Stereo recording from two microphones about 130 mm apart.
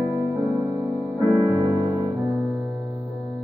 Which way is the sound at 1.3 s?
25° right (ahead or behind).